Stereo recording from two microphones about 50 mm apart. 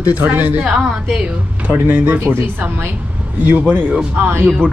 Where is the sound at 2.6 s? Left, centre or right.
Right.